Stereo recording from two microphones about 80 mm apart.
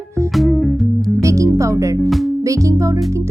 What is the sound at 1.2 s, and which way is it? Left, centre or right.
Speech, right.